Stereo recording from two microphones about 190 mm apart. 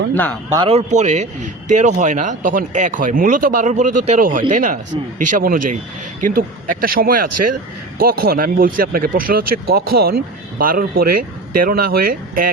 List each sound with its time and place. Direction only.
0.1 s speech: 10° left (ahead or behind)
0.5 s speech: 30° right (ahead or behind); by 12.5 s 50° right (ahead or behind)